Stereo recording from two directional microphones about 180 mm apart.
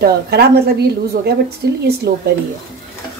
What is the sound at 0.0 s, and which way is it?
Speech, 60° right (ahead or behind).